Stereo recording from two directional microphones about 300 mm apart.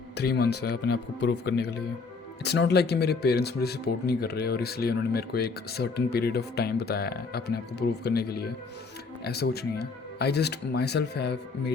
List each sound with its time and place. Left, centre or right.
0.2 s speech: left